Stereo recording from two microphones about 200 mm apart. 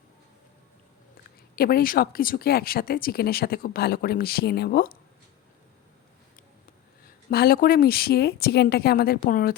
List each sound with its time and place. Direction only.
1.5 s speech: 50° left (ahead or behind)
7.0 s speech: 50° left (ahead or behind)